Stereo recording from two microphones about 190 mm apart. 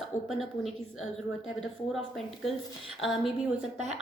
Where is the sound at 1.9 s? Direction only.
Centre (ahead or behind).